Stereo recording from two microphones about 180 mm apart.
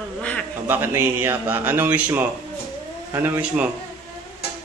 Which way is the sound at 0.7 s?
10° right (ahead or behind).